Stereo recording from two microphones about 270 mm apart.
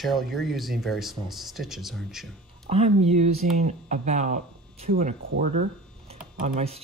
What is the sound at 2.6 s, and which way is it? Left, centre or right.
Speech, right.